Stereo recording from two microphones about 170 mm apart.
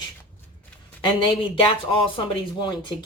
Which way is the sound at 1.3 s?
30° left (ahead or behind).